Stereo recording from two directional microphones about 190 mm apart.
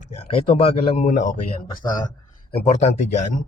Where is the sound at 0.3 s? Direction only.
30° left (ahead or behind).